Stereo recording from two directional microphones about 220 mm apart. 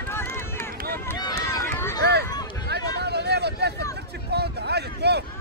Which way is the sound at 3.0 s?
50° right (ahead or behind).